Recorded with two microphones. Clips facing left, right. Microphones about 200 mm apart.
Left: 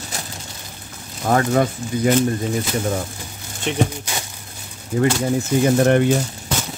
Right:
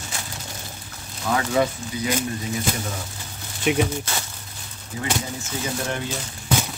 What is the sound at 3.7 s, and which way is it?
Speech, 10° right (ahead or behind).